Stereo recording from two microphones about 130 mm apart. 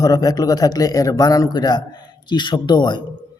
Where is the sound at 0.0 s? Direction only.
30° left (ahead or behind).